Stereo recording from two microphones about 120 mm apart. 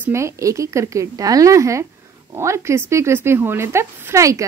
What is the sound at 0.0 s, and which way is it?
Speech, 25° right (ahead or behind).